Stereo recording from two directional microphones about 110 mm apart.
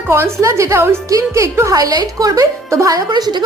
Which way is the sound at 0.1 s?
25° right (ahead or behind).